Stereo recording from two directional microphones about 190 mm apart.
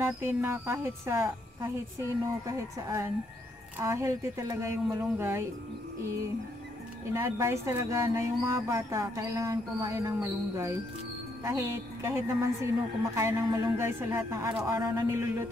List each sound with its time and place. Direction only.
0.0 s speech: 10° right (ahead or behind)
7.1 s speech: 15° right (ahead or behind)